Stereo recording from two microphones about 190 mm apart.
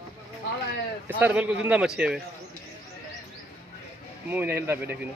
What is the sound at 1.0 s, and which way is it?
A man's voice, 10° right (ahead or behind).